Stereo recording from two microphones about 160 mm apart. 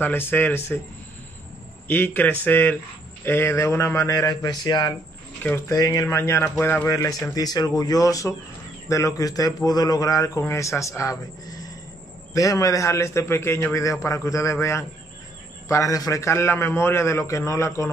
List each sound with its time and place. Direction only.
0.0 s a man's voice: 15° left (ahead or behind)
1.9 s a man's voice: 15° left (ahead or behind)